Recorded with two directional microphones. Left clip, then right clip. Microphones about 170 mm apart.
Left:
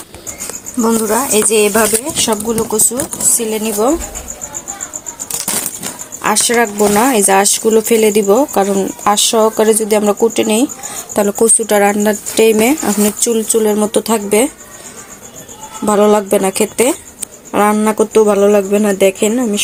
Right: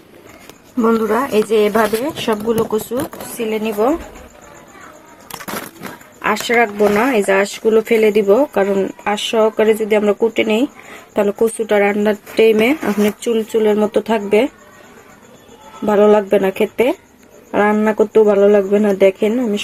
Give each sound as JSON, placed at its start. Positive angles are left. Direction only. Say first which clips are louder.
{"t": 0.8, "sound": "speech", "louder": "left 1 dB", "side_deg": 10}
{"t": 6.2, "sound": "speech", "louder": "left 2 dB", "side_deg": 25}
{"t": 15.9, "sound": "speech", "louder": "left 1 dB", "side_deg": 20}